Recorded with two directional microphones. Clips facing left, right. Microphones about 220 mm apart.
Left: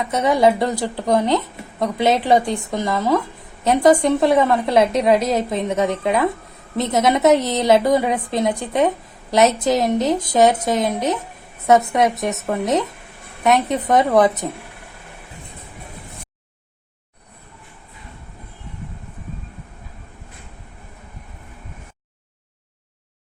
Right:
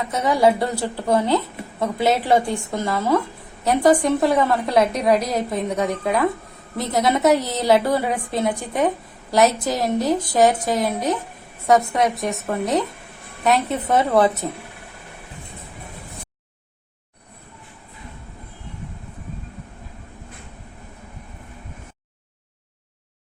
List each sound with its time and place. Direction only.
0.1 s a woman's voice: 20° left (ahead or behind)